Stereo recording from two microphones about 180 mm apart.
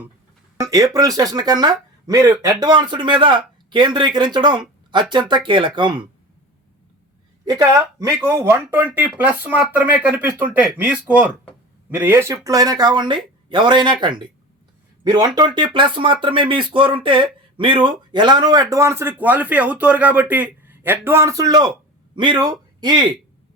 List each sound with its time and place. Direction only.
0.6 s a man's voice: 20° right (ahead or behind)
7.4 s a man's voice: 20° right (ahead or behind)